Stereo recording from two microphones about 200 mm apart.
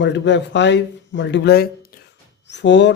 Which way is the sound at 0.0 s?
60° left (ahead or behind).